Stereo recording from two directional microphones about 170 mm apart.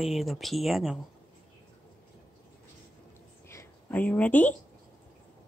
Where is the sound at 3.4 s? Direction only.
10° left (ahead or behind).